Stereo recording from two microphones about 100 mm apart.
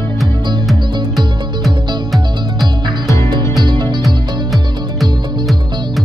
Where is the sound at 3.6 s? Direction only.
50° right (ahead or behind).